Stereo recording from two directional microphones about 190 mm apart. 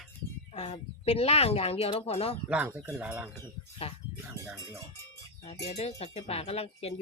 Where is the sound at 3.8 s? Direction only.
30° left (ahead or behind).